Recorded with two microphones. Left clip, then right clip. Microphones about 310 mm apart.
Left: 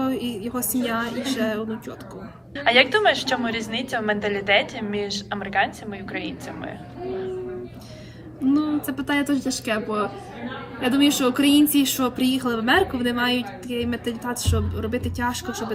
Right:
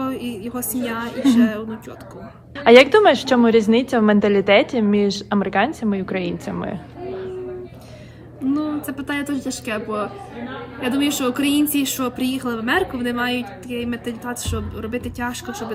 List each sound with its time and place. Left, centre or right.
0.0 s a woman's voice: centre
2.6 s a woman's voice: centre
8.5 s a woman's voice: centre